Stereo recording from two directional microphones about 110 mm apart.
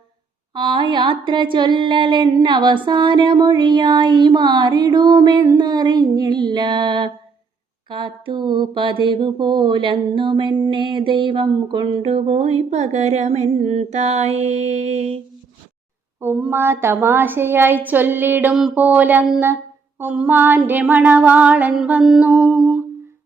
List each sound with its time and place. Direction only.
0.5 s a sound: 45° right (ahead or behind)
12.0 s humming: 70° right (ahead or behind)
16.2 s a woman's voice: 20° right (ahead or behind)
18.7 s female singing: 15° right (ahead or behind)